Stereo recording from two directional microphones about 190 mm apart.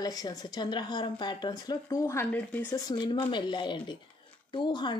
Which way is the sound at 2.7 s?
20° left (ahead or behind).